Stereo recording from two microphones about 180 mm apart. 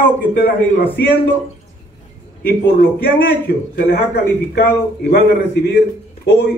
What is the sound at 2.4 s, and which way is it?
Speech, 55° left (ahead or behind).